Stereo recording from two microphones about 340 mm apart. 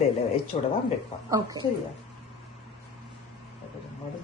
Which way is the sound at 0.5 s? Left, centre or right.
Left.